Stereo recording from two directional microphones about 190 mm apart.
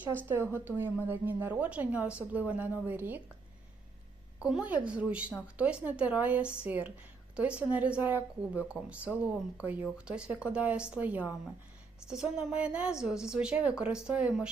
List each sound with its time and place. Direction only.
0.3 s a woman's voice: 10° right (ahead or behind)
4.4 s a woman's voice: 5° right (ahead or behind)